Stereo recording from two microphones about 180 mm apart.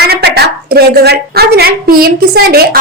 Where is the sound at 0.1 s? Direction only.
65° right (ahead or behind).